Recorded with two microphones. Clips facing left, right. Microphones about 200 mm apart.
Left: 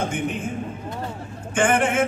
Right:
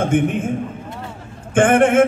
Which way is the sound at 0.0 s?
50° right (ahead or behind).